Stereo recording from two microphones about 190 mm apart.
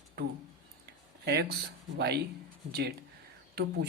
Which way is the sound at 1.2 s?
60° right (ahead or behind).